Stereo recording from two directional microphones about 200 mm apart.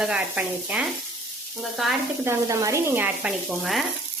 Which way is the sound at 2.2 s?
15° right (ahead or behind).